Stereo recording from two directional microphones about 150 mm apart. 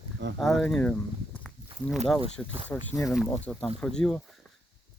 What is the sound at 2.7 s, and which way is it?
Speech, 15° left (ahead or behind).